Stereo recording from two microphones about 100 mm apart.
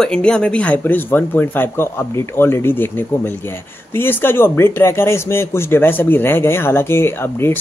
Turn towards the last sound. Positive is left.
turn(degrees=25)  # may be behind; listen again after turning